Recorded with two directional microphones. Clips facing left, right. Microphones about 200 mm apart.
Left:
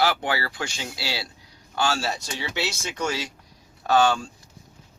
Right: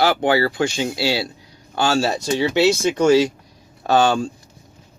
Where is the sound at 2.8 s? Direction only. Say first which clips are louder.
Right 14 dB; 30° right (ahead or behind).